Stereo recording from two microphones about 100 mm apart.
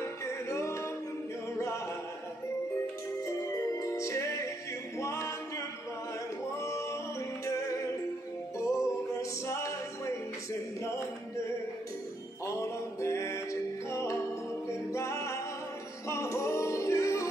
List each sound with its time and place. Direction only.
0.2 s music: 30° left (ahead or behind)
3.3 s music: 30° left (ahead or behind)
4.9 s a capella: 30° left (ahead or behind)
6.6 s music: 30° left (ahead or behind)
12.4 s music: 30° left (ahead or behind)